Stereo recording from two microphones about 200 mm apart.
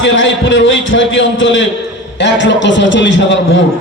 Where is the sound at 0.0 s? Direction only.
65° left (ahead or behind).